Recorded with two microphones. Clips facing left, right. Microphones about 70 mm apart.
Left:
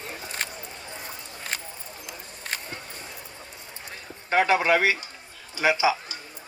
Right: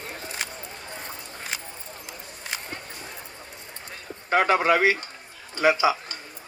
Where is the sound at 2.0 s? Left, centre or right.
Left.